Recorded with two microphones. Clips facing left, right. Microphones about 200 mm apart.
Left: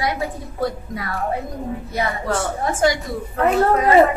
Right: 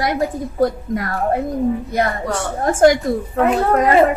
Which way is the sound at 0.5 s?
50° right (ahead or behind).